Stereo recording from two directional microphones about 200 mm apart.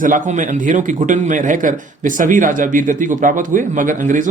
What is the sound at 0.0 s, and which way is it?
Speech, 40° right (ahead or behind).